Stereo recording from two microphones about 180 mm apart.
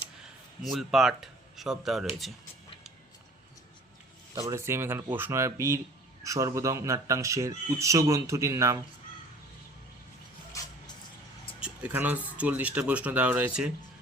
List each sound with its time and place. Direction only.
0.6 s speech: centre (ahead or behind)
4.4 s speech: 15° right (ahead or behind)
10.6 s music: 20° left (ahead or behind)
11.6 s speech: 10° right (ahead or behind)